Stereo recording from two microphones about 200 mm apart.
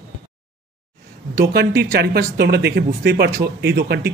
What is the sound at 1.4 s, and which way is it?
A man's voice, 55° right (ahead or behind).